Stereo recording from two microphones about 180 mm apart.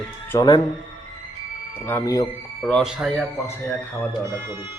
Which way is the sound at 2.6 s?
Centre (ahead or behind).